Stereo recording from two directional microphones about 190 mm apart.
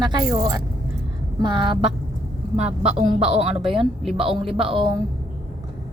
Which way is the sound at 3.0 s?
35° right (ahead or behind).